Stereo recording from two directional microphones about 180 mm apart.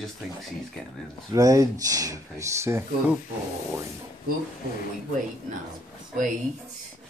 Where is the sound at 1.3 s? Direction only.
20° right (ahead or behind).